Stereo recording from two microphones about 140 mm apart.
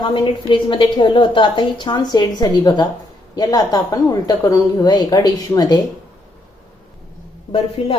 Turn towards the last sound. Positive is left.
turn(degrees=45)  # may be behind; listen again after turning